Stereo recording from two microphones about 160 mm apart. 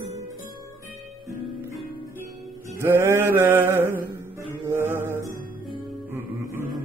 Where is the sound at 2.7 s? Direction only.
15° right (ahead or behind).